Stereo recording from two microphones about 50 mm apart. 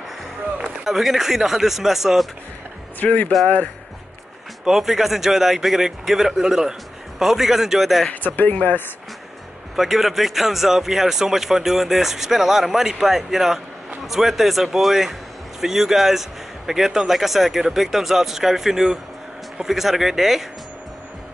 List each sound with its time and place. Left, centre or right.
0.8 s speech: centre
3.0 s speech: left
4.6 s a man's voice: centre
8.2 s speech: left
9.8 s a man's voice: centre